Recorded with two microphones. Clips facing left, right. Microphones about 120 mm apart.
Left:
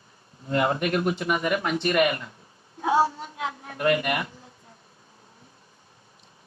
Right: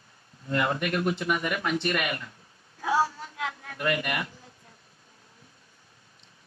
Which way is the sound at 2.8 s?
25° left (ahead or behind).